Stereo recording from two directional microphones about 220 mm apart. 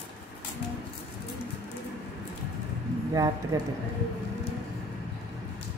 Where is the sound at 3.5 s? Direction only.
15° right (ahead or behind).